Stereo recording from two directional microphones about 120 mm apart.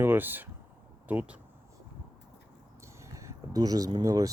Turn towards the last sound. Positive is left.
turn(degrees=-30)  # may be behind; listen again after turning